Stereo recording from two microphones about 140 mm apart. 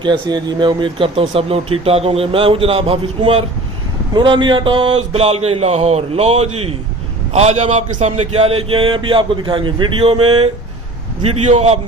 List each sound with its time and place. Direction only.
0.0 s a man's voice: 35° right (ahead or behind); by 11.8 s 50° right (ahead or behind)